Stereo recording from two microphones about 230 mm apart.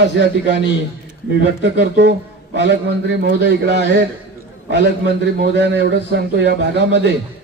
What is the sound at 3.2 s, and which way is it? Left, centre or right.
Speech, right.